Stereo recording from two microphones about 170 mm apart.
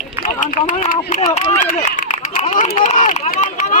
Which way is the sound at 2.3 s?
45° left (ahead or behind).